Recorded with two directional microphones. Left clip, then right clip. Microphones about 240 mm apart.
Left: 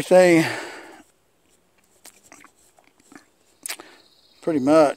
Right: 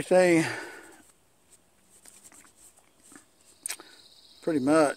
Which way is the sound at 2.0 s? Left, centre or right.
Left.